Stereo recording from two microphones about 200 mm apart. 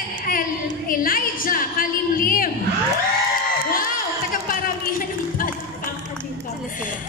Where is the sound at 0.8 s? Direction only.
45° left (ahead or behind).